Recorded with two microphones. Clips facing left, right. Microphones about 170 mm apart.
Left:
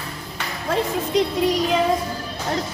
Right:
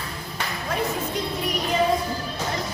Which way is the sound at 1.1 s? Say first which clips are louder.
Left 9 dB; 90° left.